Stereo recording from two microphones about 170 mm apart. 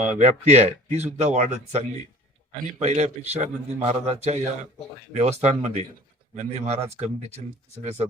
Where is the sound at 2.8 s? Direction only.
40° right (ahead or behind).